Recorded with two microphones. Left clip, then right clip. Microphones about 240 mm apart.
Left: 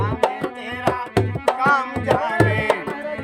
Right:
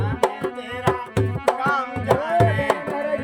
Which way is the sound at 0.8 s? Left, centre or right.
Centre.